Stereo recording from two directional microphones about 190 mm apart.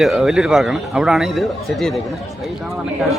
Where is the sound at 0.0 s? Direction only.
Centre (ahead or behind).